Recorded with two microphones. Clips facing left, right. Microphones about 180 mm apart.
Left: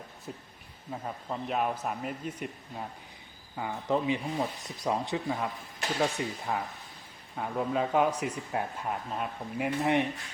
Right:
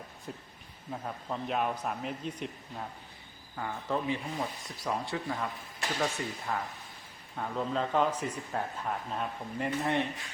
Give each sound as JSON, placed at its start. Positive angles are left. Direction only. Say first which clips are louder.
{"t": 0.3, "sound": "a man's voice", "louder": "left 1 dB", "side_deg": 0}
{"t": 3.5, "sound": "speech", "louder": "left 4 dB", "side_deg": 15}